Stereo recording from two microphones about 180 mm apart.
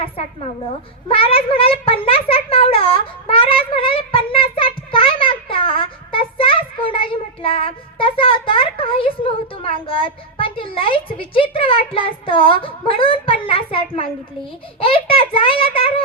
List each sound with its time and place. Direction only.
0.0 s a child's voice: 35° left (ahead or behind)